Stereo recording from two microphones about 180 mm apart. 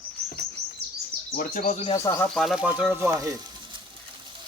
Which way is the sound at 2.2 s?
Centre (ahead or behind).